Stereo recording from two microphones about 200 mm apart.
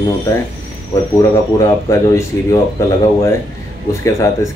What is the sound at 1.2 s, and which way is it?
Speech, 15° left (ahead or behind).